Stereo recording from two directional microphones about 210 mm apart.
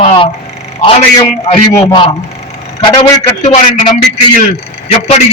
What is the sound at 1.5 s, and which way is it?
Speech, 25° left (ahead or behind).